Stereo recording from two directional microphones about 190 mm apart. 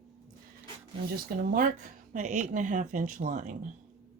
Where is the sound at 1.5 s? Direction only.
40° right (ahead or behind).